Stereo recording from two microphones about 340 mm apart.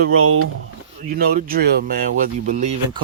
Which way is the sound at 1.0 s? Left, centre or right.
Right.